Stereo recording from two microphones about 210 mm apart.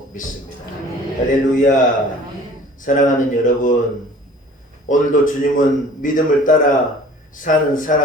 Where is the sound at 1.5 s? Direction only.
40° left (ahead or behind).